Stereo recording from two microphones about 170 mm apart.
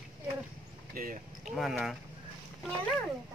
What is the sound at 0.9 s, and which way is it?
Speech, 55° right (ahead or behind).